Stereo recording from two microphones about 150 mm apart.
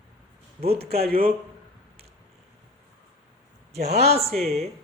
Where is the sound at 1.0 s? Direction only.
75° right (ahead or behind).